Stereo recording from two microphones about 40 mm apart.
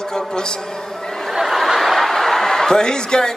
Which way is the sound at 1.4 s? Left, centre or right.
Centre.